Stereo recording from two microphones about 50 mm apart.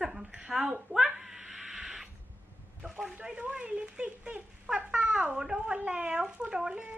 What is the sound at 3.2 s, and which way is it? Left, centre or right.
Speech, right.